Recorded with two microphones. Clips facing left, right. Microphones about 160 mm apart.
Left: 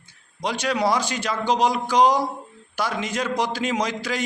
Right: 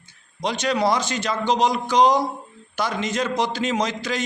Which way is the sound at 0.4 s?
10° left (ahead or behind).